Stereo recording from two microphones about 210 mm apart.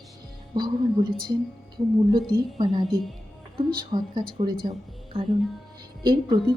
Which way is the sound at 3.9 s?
20° right (ahead or behind).